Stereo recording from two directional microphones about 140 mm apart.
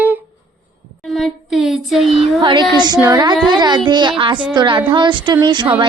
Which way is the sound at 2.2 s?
35° right (ahead or behind).